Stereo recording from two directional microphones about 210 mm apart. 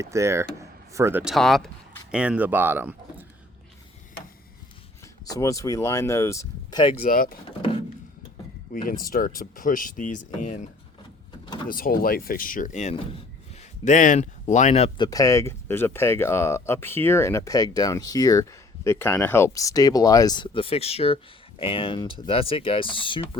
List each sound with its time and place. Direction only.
0.0 s speech: 15° right (ahead or behind)
5.2 s speech: 15° left (ahead or behind)
7.1 s speech: 45° left (ahead or behind)
8.7 s speech: 40° left (ahead or behind)
11.7 s speech: 45° left (ahead or behind); by 23.4 s 25° left (ahead or behind)